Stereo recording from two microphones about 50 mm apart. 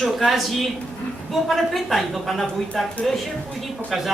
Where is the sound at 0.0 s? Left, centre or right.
Centre.